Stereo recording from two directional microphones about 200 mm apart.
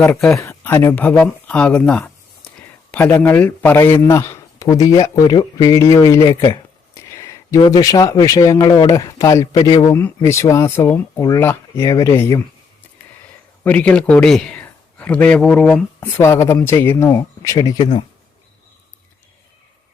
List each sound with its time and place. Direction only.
0.0 s a man's voice: 5° left (ahead or behind)
13.7 s a man's voice: 5° left (ahead or behind); by 18.0 s 25° left (ahead or behind)